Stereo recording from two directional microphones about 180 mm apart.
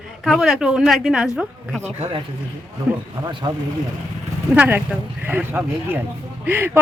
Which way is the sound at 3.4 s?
25° right (ahead or behind).